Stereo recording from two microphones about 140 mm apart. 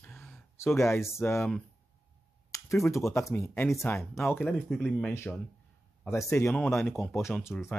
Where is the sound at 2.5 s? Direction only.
20° left (ahead or behind).